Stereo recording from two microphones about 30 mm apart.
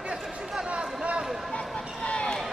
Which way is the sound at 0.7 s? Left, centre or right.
Right.